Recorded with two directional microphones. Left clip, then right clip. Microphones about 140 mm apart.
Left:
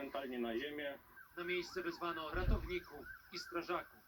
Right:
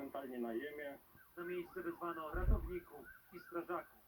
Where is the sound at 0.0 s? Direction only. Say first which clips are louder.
Left 3 dB; 30° left (ahead or behind).